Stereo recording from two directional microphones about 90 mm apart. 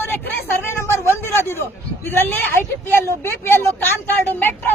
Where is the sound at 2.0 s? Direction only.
25° left (ahead or behind).